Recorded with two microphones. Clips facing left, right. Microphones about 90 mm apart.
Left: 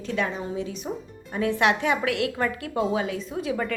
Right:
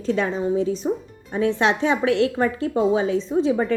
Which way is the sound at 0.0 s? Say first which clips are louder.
Right 6 dB; 35° right (ahead or behind).